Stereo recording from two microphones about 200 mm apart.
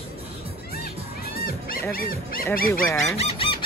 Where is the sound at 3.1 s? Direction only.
30° left (ahead or behind).